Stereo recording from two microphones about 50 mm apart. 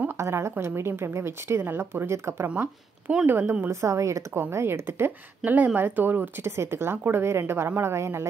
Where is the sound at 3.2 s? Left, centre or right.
Right.